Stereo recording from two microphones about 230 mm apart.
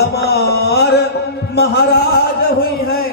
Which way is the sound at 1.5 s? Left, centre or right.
Left.